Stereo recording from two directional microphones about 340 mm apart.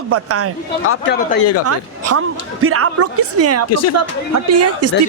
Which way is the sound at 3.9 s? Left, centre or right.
Right.